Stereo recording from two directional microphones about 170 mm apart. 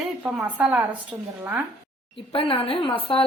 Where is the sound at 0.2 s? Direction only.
10° right (ahead or behind).